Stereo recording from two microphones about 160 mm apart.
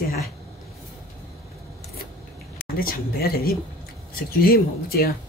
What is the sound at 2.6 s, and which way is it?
Speech, 65° left (ahead or behind).